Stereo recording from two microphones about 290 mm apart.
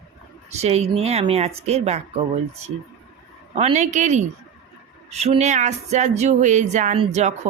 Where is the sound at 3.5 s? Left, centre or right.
Right.